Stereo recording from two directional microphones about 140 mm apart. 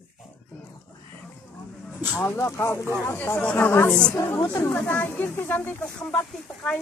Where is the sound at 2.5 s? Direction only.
20° left (ahead or behind).